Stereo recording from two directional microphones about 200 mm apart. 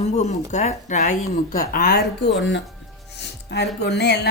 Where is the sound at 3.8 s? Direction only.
60° left (ahead or behind).